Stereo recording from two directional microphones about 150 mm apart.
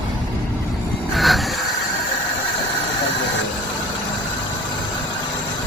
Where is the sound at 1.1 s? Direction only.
Centre (ahead or behind).